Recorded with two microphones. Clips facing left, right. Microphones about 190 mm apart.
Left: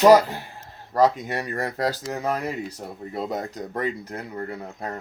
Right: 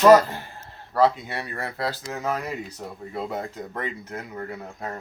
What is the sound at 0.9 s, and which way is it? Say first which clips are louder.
Speech: left 1 dB; 40° left (ahead or behind).